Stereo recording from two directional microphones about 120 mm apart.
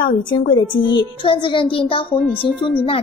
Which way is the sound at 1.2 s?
45° left (ahead or behind).